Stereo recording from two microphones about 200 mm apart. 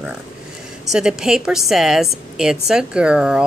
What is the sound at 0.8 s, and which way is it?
A woman's voice, centre (ahead or behind).